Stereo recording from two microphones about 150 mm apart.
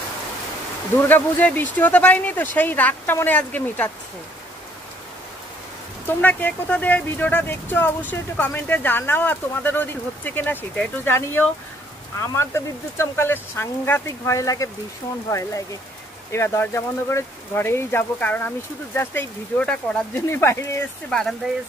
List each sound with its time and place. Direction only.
0.9 s speech: 10° left (ahead or behind)
6.0 s speech: 10° left (ahead or behind)
20.2 s speech: 15° left (ahead or behind)
21.1 s speech: 5° left (ahead or behind)